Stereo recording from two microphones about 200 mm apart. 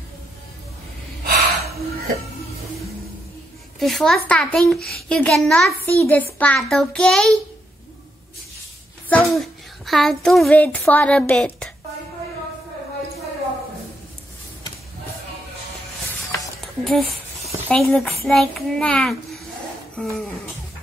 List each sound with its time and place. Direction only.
1.2 s gasp: 50° right (ahead or behind)
3.8 s a child's voice: centre (ahead or behind)
9.1 s a child's voice: centre (ahead or behind)
16.6 s a sound: centre (ahead or behind)
17.5 s a child's voice: 5° left (ahead or behind)